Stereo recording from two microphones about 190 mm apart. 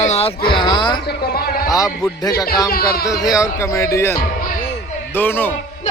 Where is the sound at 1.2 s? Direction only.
55° left (ahead or behind).